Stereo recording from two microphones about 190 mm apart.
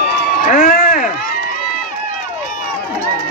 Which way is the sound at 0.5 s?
40° left (ahead or behind).